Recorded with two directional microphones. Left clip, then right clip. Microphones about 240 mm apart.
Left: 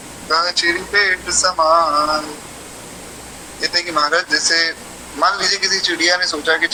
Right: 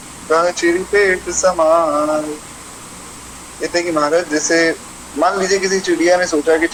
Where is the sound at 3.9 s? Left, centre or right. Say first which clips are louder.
Right 1 dB; centre.